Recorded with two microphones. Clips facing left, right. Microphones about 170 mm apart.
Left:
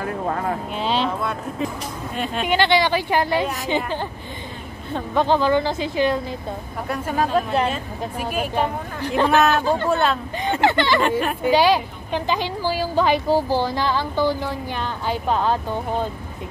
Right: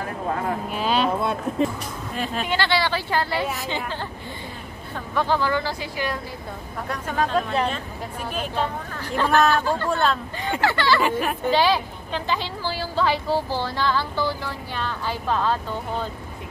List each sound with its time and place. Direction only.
0.7 s speech: 25° left (ahead or behind)
2.1 s speech: centre (ahead or behind)
2.4 s speech: 20° left (ahead or behind)
6.9 s speech: 5° left (ahead or behind)
9.8 s speech: 5° left (ahead or behind)
10.6 s speech: 20° left (ahead or behind)
11.0 s speech: 5° right (ahead or behind)
11.4 s speech: 15° left (ahead or behind)